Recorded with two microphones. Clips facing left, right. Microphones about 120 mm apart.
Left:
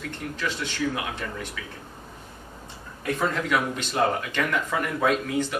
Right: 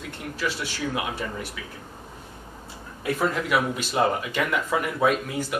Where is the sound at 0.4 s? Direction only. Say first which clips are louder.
Even; 5° right (ahead or behind).